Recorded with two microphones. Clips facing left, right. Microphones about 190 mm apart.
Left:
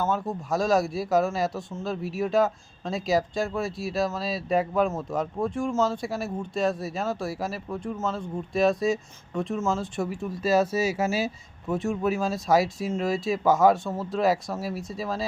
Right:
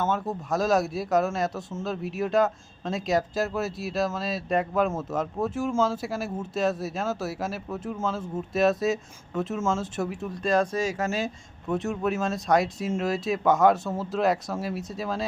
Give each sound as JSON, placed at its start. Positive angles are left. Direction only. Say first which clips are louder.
{"t": 0.0, "sound": "speech", "louder": "even", "side_deg": 5}